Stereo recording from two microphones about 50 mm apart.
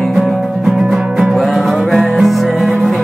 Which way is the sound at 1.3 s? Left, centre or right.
Centre.